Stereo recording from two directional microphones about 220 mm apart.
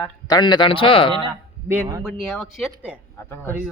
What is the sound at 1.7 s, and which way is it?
Speech, 10° right (ahead or behind).